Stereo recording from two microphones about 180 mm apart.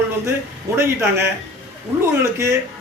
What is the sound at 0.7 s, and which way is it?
A man's voice, 15° right (ahead or behind).